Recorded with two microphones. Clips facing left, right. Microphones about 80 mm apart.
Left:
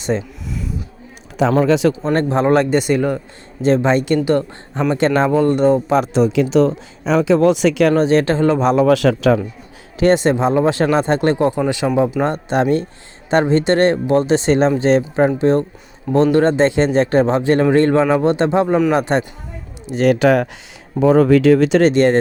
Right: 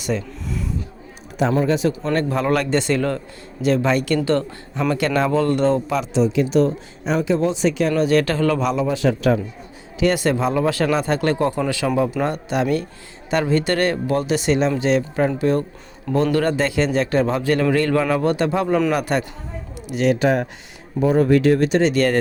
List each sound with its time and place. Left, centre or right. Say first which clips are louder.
0.1 s speech: left 4 dB; left
1.5 s speech: left 5 dB; left
2.0 s a man's voice: left 4 dB; left
3.6 s a man's voice: left 4 dB; left
5.9 s speech: left 5 dB; left
6.3 s speech: left 3 dB; left
7.9 s a man's voice: left 3 dB; left
8.8 s speech: left 6 dB; left
10.0 s a man's voice: left 5 dB; left
20.1 s speech: left 5 dB; left
21.9 s a man's voice: left 5 dB; left